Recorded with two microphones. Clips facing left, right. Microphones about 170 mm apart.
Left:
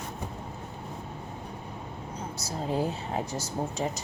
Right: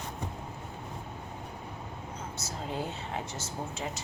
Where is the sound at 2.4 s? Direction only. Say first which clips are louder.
Left 7 dB; 35° left (ahead or behind).